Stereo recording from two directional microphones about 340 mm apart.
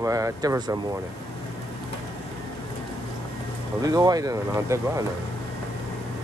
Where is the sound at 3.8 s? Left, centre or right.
Centre.